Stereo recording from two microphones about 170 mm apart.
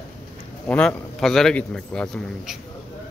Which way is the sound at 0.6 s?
5° left (ahead or behind).